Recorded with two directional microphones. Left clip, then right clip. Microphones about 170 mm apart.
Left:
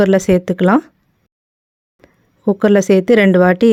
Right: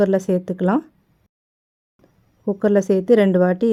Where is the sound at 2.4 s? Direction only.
30° left (ahead or behind).